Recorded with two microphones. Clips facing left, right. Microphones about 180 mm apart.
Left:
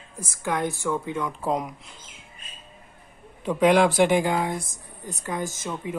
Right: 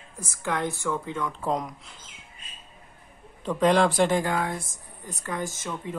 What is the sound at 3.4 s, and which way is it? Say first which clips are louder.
Speech: left 2 dB; 10° left (ahead or behind).